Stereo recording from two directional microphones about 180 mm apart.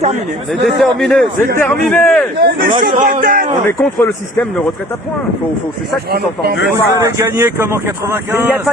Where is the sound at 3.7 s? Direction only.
10° left (ahead or behind).